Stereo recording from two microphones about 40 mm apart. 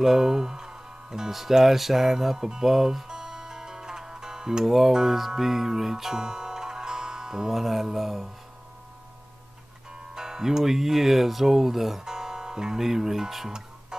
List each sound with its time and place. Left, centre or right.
0.0 s speech: centre
1.3 s music: centre
10.1 s speech: centre
12.0 s speech: centre